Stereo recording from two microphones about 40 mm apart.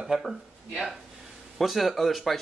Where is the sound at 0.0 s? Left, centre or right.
Centre.